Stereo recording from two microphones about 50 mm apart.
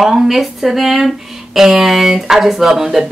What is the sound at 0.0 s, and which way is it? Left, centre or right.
Speech, centre.